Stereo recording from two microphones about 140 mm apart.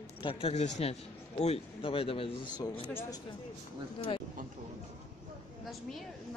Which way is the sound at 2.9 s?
15° left (ahead or behind).